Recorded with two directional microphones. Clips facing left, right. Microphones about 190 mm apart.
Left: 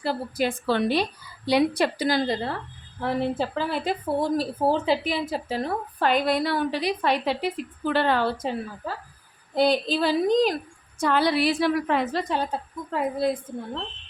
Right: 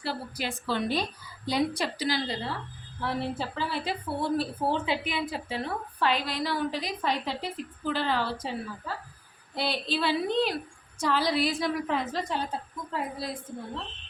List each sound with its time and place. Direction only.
0.0 s a woman's voice: 45° left (ahead or behind)
0.7 s a woman's voice: 75° left (ahead or behind); by 8.5 s 55° left (ahead or behind)
9.6 s a woman's voice: 45° left (ahead or behind)
11.0 s a woman's voice: 60° left (ahead or behind)
12.9 s a woman's voice: 55° left (ahead or behind)